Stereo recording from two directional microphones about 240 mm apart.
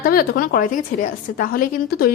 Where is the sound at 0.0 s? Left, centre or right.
Left.